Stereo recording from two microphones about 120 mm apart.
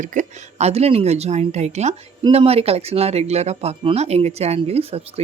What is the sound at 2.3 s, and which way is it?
Speech, 55° right (ahead or behind).